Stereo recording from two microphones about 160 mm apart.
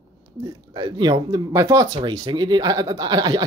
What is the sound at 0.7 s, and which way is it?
Speech, 25° right (ahead or behind).